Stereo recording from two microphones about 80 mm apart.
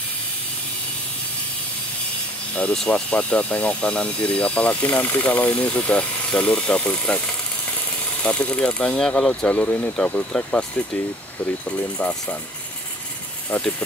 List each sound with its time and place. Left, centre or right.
2.5 s speech: centre
11.6 s speech: centre